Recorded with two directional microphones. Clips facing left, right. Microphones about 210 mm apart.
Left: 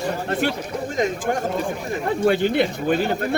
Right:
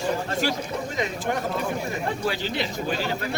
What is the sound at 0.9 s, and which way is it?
Speech, 45° left (ahead or behind).